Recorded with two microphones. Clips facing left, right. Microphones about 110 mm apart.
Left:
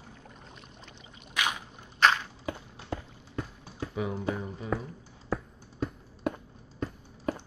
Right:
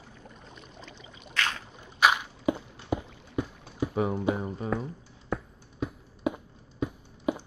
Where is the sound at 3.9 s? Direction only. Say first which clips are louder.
Right 4 dB; 45° right (ahead or behind).